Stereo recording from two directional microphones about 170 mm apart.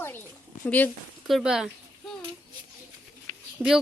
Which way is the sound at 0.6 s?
10° left (ahead or behind).